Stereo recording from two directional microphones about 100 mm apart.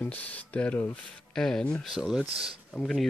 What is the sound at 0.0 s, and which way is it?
Speech, 15° left (ahead or behind).